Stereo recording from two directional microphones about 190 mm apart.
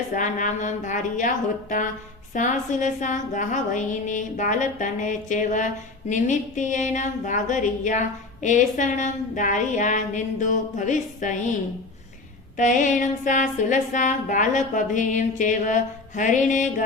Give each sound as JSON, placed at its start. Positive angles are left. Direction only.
{"t": 0.1, "sound": "a woman's voice", "side_deg": 40}
{"t": 2.3, "sound": "a woman's voice", "side_deg": 40}
{"t": 12.5, "sound": "a woman's voice", "side_deg": 40}